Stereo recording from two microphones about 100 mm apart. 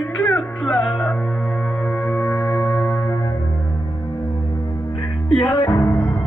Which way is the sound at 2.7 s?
10° left (ahead or behind).